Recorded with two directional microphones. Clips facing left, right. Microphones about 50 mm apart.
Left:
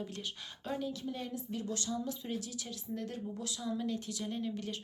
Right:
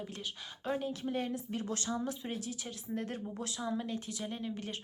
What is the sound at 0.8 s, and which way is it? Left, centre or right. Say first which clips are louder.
A woman's voice: right 2 dB; right.